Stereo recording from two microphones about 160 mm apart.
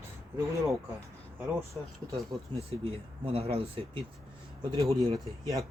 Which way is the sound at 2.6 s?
35° right (ahead or behind).